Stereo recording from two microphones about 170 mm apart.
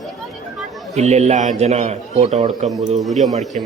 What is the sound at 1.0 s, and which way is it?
A man's voice, 40° right (ahead or behind).